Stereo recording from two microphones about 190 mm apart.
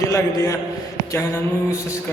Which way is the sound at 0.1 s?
15° left (ahead or behind).